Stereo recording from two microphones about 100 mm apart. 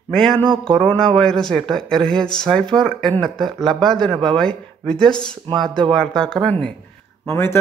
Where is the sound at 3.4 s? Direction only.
Centre (ahead or behind).